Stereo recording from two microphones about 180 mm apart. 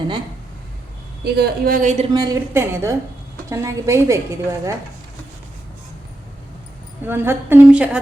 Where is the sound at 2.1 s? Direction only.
20° right (ahead or behind).